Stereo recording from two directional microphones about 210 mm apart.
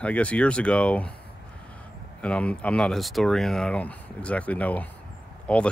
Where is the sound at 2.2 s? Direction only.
5° left (ahead or behind).